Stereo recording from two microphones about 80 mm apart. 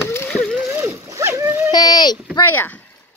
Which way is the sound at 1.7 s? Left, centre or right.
Left.